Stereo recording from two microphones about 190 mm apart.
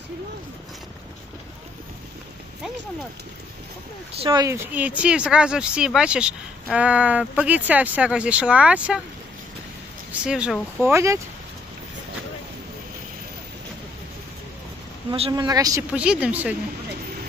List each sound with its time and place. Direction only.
4.2 s speech: 20° right (ahead or behind)
4.7 s speech: 5° right (ahead or behind)
10.2 s speech: 5° right (ahead or behind)
15.1 s speech: 30° right (ahead or behind)
15.4 s speech: 20° right (ahead or behind)
15.9 s speech: 5° right (ahead or behind)